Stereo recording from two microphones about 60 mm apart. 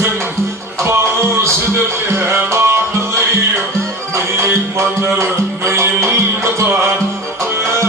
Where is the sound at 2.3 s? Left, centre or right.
Right.